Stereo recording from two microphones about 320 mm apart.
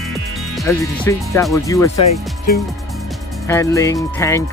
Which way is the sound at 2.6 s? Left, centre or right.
Centre.